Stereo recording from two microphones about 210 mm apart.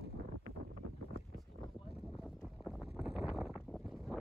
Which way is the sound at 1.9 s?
Centre (ahead or behind).